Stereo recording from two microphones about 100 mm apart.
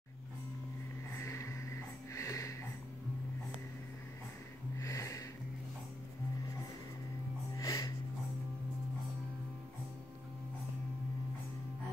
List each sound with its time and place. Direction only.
1.1 s vehicle: 30° left (ahead or behind)
2.1 s music: 30° left (ahead or behind)
4.7 s music: 30° left (ahead or behind)
7.5 s music: 35° left (ahead or behind)